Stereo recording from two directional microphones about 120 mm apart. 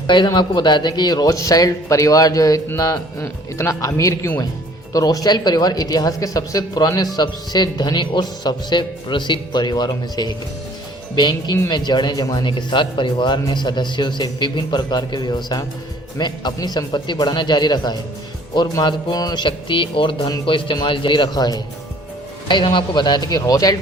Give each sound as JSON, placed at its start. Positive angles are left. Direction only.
{"t": 0.3, "sound": "speech", "side_deg": 40}